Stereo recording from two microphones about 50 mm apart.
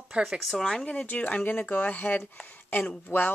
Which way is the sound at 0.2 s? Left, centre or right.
Centre.